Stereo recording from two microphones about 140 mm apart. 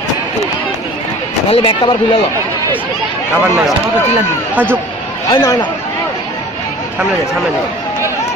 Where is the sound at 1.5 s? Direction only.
40° left (ahead or behind).